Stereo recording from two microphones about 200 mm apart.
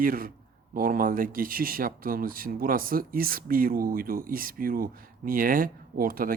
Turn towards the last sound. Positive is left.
turn(degrees=-45)  # may be behind; listen again after turning